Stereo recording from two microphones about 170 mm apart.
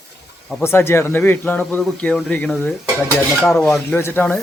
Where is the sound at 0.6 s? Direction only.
15° left (ahead or behind).